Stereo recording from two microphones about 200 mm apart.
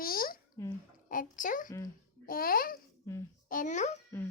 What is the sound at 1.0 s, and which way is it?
A child's voice, 45° left (ahead or behind).